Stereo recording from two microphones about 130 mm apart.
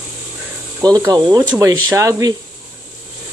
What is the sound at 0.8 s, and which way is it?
Speech, 30° right (ahead or behind).